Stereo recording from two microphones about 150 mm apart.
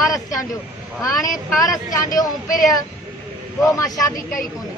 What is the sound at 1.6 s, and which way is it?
Speech, 25° left (ahead or behind).